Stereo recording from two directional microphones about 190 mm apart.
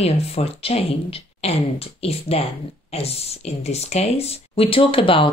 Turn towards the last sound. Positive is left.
turn(degrees=25)  # may be behind; listen again after turning